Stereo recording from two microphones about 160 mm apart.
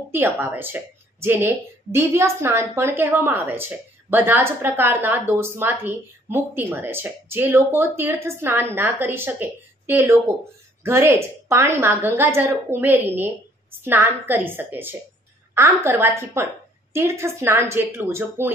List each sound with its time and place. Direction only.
0.1 s a woman's voice: 10° right (ahead or behind)